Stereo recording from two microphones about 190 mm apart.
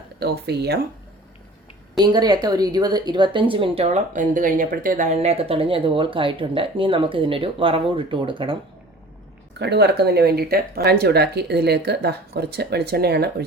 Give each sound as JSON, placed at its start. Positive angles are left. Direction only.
{"t": 0.2, "sound": "speech", "side_deg": -60}
{"t": 2.0, "sound": "speech", "side_deg": -20}
{"t": 9.6, "sound": "speech", "side_deg": -60}